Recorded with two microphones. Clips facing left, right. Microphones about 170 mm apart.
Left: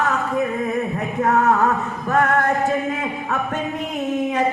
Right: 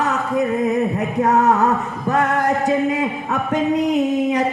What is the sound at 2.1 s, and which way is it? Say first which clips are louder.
Music: even; 20° right (ahead or behind).